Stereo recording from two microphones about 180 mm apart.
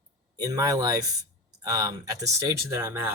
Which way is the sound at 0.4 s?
20° right (ahead or behind).